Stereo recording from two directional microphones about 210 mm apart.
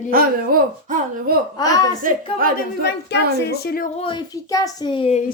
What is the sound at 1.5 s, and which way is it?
Speech, 15° left (ahead or behind).